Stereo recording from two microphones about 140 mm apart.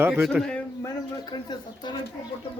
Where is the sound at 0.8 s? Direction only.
30° left (ahead or behind).